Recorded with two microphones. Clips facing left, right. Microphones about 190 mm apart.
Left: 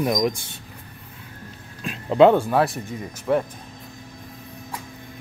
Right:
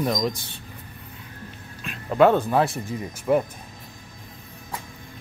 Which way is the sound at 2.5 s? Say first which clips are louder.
Left 1 dB; centre (ahead or behind).